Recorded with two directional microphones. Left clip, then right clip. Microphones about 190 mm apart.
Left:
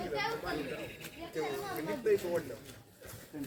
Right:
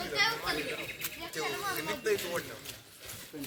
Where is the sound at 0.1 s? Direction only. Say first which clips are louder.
Right 8 dB; 50° left (ahead or behind).